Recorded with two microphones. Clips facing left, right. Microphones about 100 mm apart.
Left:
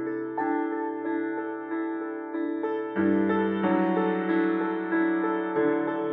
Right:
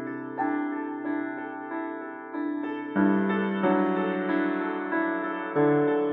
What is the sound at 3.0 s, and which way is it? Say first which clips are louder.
Music: even; 40° right (ahead or behind).